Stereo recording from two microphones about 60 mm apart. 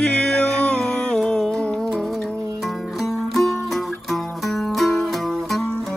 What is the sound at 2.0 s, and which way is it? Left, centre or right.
Music, centre.